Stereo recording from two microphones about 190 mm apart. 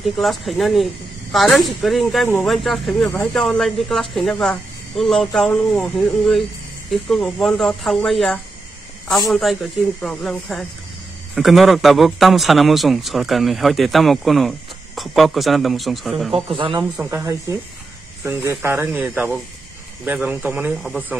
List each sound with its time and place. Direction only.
0.0 s speech: centre (ahead or behind)
16.4 s speech: 25° right (ahead or behind)
16.9 s speech: 10° right (ahead or behind)